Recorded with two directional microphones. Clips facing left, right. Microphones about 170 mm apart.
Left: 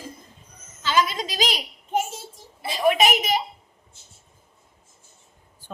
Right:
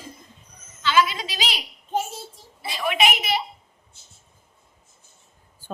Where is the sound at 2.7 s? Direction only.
40° left (ahead or behind).